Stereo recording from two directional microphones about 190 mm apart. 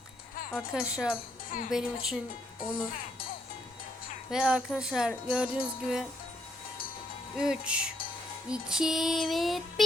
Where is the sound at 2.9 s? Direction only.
50° left (ahead or behind).